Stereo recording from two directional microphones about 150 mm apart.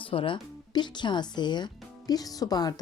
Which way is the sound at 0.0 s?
35° left (ahead or behind).